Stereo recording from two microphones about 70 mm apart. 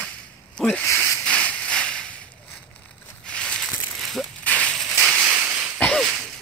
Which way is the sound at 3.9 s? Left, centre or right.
Centre.